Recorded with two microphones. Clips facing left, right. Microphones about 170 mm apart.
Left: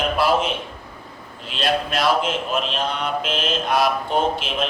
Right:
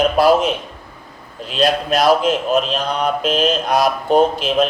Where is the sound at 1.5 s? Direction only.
40° right (ahead or behind).